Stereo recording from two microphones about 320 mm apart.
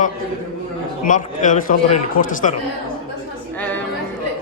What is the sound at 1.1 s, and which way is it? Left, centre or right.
A man's voice, left.